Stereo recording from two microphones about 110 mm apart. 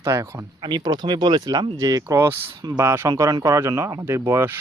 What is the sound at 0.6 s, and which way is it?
Speech, 40° right (ahead or behind).